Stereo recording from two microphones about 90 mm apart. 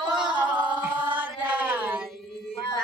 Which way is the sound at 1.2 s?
20° right (ahead or behind).